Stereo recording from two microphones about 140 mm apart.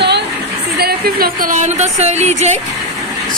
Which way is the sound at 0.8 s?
90° right.